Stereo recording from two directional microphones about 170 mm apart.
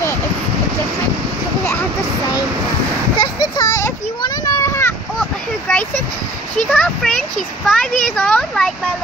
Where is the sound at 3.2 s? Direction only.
25° left (ahead or behind).